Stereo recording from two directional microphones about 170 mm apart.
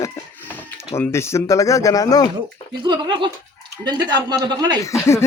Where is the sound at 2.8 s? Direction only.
25° right (ahead or behind).